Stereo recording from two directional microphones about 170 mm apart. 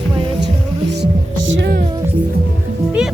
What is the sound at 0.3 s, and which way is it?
Music, 90° right.